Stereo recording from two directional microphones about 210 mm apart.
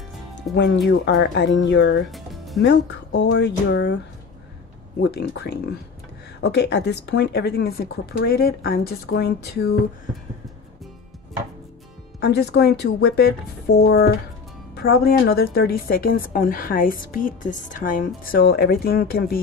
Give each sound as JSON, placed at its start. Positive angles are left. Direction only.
{"t": 0.4, "sound": "speech", "side_deg": 55}
{"t": 2.0, "sound": "music", "side_deg": 0}
{"t": 2.6, "sound": "speech", "side_deg": 55}
{"t": 5.0, "sound": "speech", "side_deg": 50}
{"t": 12.2, "sound": "speech", "side_deg": 50}